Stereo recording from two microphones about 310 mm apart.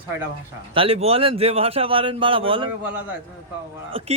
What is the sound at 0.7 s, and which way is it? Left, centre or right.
A man's voice, centre.